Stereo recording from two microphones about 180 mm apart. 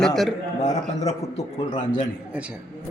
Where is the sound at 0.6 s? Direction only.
40° left (ahead or behind).